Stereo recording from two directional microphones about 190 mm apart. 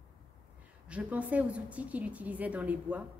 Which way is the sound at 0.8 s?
5° right (ahead or behind).